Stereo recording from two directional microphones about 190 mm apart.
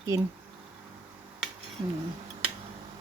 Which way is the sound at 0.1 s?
15° right (ahead or behind).